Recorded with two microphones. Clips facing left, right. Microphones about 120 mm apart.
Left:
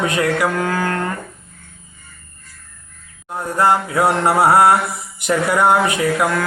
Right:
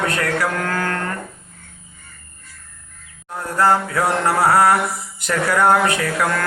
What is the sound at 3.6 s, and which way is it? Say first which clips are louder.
A man's voice: left 1 dB; 20° left (ahead or behind).